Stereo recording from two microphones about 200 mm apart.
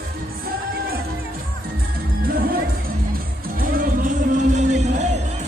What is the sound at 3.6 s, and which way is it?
Music, 45° right (ahead or behind).